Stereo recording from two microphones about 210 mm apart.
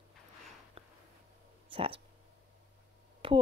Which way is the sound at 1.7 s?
25° right (ahead or behind).